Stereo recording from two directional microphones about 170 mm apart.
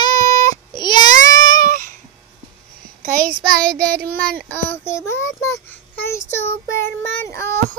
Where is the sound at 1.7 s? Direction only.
50° right (ahead or behind).